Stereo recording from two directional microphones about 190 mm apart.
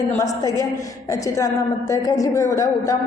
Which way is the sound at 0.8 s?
15° left (ahead or behind).